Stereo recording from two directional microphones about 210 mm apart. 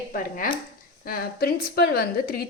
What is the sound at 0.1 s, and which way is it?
A woman's voice, 40° left (ahead or behind).